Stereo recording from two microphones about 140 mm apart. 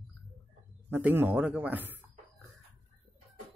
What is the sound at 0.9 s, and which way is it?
Speech, 15° right (ahead or behind).